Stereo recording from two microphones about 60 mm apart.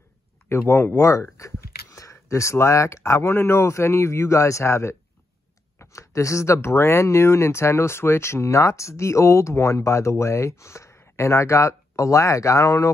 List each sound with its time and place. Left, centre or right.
0.5 s a man's voice: left
0.9 s speech: left
1.3 s a sound: left
3.3 s a man's voice: left